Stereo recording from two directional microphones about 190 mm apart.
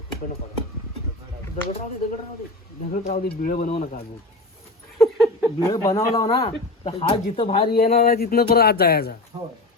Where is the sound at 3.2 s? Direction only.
50° left (ahead or behind).